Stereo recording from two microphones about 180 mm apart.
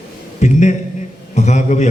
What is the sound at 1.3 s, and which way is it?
Speech, 40° left (ahead or behind).